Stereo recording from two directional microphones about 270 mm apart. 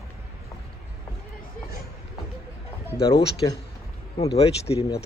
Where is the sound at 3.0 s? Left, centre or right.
Centre.